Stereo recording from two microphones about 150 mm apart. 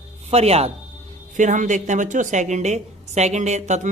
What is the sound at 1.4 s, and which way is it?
A woman's voice, 55° right (ahead or behind).